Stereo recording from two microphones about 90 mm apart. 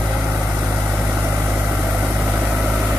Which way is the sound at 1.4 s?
15° right (ahead or behind).